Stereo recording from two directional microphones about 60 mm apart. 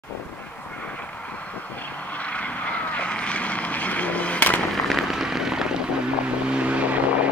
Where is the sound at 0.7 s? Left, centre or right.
Left.